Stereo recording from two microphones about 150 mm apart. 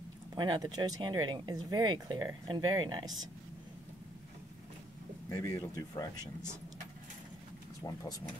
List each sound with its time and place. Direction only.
0.3 s speech: 25° right (ahead or behind)
5.3 s speech: 20° left (ahead or behind)
7.8 s speech: 25° left (ahead or behind)